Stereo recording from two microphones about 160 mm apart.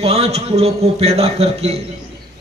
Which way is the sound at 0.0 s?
40° right (ahead or behind).